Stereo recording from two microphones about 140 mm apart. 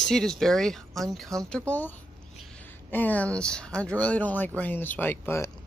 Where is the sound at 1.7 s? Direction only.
10° left (ahead or behind).